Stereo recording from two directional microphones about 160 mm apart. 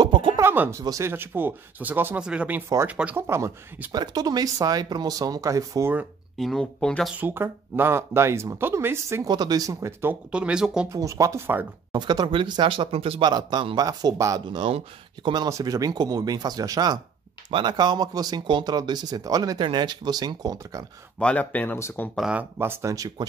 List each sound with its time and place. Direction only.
0.0 s music: 30° right (ahead or behind)
0.4 s speech: 15° right (ahead or behind)
6.3 s speech: centre (ahead or behind)
7.2 s speech: 10° right (ahead or behind)
10.9 s speech: 20° right (ahead or behind)
11.9 s speech: 25° right (ahead or behind)
21.2 s speech: 10° left (ahead or behind)
22.2 s speech: 10° right (ahead or behind)